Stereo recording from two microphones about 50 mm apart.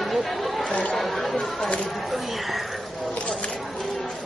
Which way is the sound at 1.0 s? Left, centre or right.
Centre.